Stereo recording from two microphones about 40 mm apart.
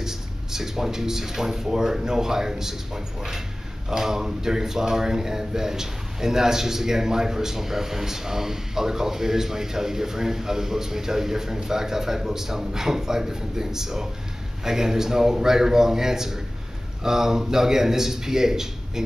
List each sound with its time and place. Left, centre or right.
0.0 s speech: centre